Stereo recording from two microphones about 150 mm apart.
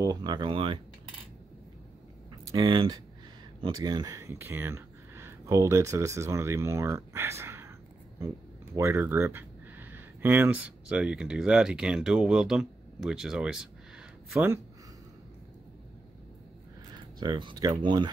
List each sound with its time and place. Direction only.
0.0 s speech: 25° right (ahead or behind)
2.5 s speech: 30° right (ahead or behind); by 7.7 s 15° right (ahead or behind)
8.7 s speech: 15° right (ahead or behind)
16.9 s speech: 30° right (ahead or behind)